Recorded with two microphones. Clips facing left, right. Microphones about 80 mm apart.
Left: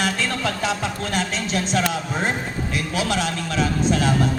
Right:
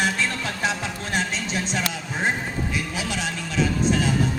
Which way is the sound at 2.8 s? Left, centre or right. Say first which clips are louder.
Left 5 dB; left.